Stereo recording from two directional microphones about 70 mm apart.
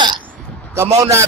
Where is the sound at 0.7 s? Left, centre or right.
Right.